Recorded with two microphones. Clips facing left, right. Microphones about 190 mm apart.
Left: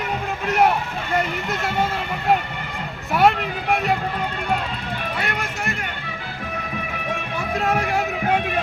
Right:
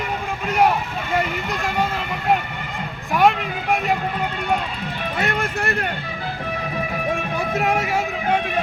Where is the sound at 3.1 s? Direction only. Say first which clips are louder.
Even; 5° left (ahead or behind).